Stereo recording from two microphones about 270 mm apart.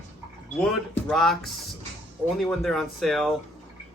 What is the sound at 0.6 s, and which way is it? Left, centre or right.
Speech, centre.